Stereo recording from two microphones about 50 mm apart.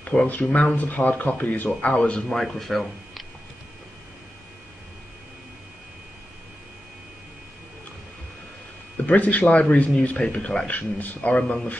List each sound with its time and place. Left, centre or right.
0.3 s speech: left
1.8 s speech: left
2.3 s speech: centre
9.0 s speech: left
10.7 s speech: left